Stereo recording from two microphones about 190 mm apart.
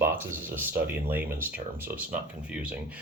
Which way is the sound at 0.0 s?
10° right (ahead or behind).